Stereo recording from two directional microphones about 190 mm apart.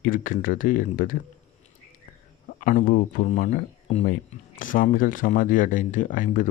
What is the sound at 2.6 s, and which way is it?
Speech, 45° left (ahead or behind).